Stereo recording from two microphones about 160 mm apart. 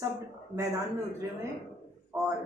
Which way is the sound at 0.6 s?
20° right (ahead or behind).